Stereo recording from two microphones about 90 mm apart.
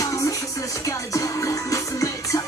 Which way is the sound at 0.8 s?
35° left (ahead or behind).